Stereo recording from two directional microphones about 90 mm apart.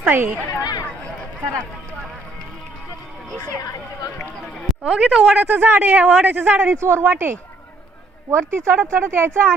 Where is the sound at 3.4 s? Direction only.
45° left (ahead or behind).